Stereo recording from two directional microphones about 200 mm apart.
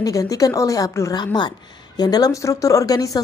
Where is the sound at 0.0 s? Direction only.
15° left (ahead or behind).